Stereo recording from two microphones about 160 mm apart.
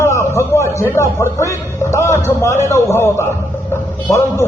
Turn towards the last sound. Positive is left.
turn(degrees=15)  # may be behind; listen again after turning